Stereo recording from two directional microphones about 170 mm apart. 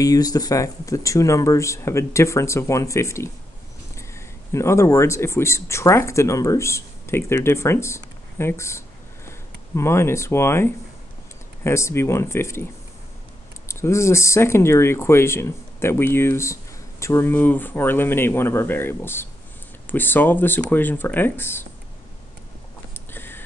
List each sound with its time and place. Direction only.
0.0 s speech: 20° left (ahead or behind)
13.7 s speech: 15° left (ahead or behind)
22.9 s a sound: 10° left (ahead or behind)